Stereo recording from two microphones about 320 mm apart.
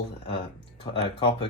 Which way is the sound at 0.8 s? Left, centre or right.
Centre.